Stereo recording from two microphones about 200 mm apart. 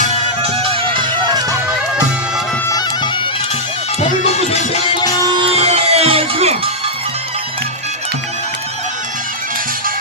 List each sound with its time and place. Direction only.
0.0 s music: 30° right (ahead or behind)
2.6 s music: 20° left (ahead or behind)
4.3 s music: 30° left (ahead or behind)
5.3 s music: 25° right (ahead or behind)